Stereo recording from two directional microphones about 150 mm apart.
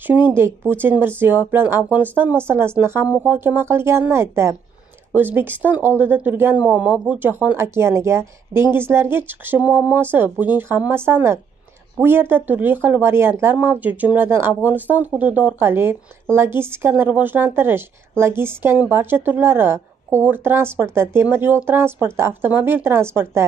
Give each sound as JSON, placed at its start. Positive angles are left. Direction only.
{"t": 0.0, "sound": "speech", "side_deg": -15}